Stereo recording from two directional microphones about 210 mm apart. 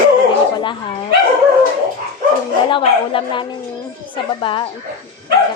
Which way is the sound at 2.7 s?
25° left (ahead or behind).